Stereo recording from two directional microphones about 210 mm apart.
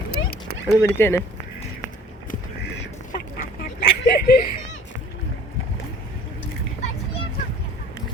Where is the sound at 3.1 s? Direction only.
45° left (ahead or behind).